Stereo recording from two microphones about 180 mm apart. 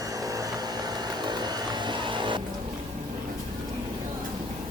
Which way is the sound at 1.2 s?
25° right (ahead or behind).